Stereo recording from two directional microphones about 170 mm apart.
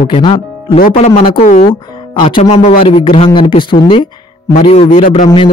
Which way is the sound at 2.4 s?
40° left (ahead or behind).